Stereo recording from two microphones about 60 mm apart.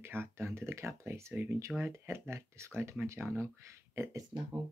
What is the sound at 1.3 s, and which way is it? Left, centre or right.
Speech, right.